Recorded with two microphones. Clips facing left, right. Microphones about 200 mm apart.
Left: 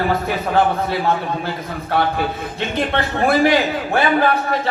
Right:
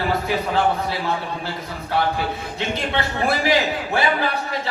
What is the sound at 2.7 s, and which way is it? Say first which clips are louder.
A man's voice: left 5 dB; 55° left (ahead or behind).